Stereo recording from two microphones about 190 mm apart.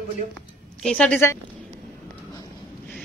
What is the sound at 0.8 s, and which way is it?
Speech, 5° left (ahead or behind).